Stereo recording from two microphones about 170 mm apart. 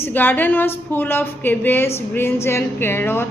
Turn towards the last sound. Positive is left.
turn(degrees=15)  # may be behind; listen again after turning